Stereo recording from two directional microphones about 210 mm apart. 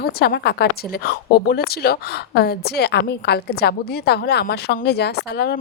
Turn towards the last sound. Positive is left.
turn(degrees=50)  # may be behind; listen again after turning